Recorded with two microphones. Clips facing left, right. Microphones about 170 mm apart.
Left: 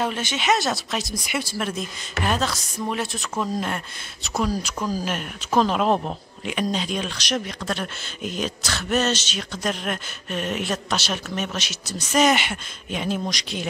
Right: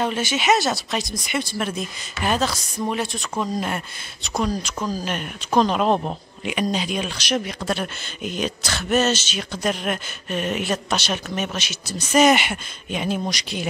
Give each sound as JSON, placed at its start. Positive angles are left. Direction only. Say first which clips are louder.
{"t": 0.0, "sound": "speech", "louder": "right 3 dB", "side_deg": -5}